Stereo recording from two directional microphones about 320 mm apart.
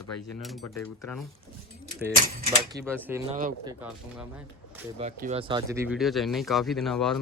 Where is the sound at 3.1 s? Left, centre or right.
Centre.